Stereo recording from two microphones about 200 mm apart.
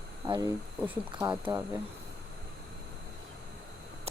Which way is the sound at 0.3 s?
15° right (ahead or behind).